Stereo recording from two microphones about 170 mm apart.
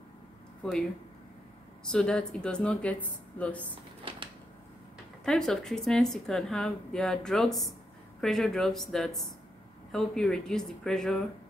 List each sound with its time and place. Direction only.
1.9 s speech: 5° left (ahead or behind)
5.2 s speech: centre (ahead or behind)